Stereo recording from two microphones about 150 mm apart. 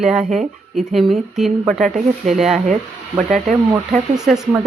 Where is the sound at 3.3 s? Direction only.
55° right (ahead or behind).